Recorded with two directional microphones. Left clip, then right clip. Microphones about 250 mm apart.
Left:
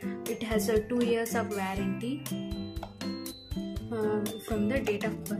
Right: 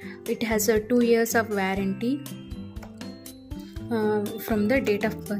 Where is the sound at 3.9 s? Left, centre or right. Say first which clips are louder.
Right 6 dB; right.